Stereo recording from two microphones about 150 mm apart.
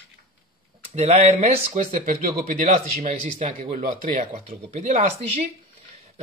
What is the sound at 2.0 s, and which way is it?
Speech, 65° right (ahead or behind).